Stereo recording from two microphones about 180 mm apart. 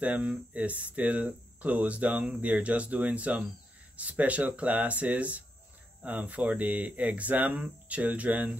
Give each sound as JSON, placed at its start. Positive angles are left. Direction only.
{"t": 0.0, "sound": "speech", "side_deg": -10}